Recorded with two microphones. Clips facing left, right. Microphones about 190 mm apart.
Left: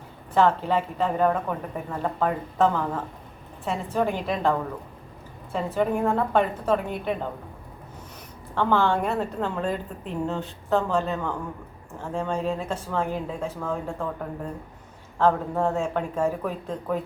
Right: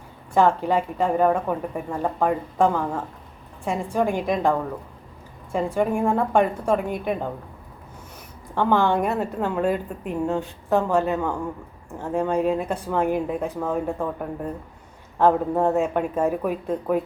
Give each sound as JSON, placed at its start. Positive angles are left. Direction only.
{"t": 0.3, "sound": "a woman's voice", "side_deg": -10}
{"t": 8.5, "sound": "a woman's voice", "side_deg": -15}
{"t": 15.2, "sound": "a woman's voice", "side_deg": -15}